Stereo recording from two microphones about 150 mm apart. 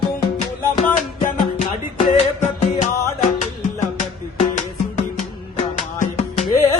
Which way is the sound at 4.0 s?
55° left (ahead or behind).